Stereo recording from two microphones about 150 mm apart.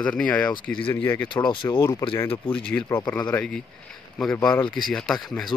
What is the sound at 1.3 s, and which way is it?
Speech, 30° left (ahead or behind).